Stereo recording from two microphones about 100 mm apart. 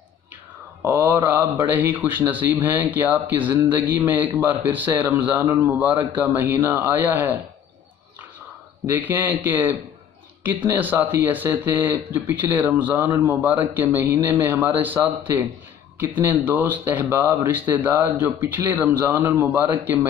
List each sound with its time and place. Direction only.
0.8 s speech: 20° right (ahead or behind)
8.8 s speech: 20° right (ahead or behind)